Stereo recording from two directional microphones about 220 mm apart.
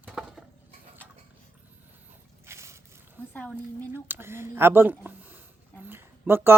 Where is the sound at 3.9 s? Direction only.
10° right (ahead or behind).